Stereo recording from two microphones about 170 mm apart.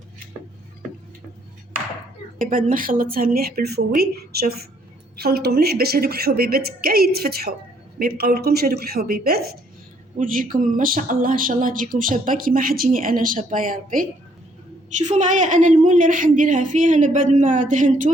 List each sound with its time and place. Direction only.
2.5 s a woman's voice: 55° right (ahead or behind)